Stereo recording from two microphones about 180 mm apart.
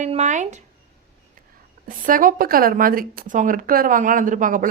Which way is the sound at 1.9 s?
50° right (ahead or behind).